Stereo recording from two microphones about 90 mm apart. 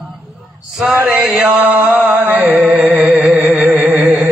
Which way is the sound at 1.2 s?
10° right (ahead or behind).